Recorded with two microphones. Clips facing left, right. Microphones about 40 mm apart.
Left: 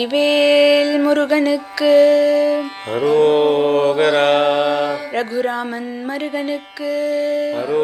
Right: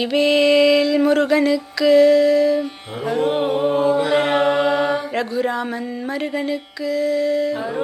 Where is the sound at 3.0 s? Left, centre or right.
Left.